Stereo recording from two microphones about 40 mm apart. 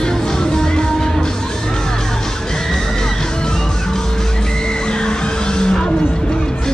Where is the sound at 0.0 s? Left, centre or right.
Centre.